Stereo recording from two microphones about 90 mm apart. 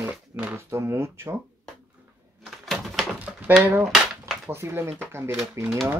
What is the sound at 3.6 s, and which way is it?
Speech, 20° right (ahead or behind).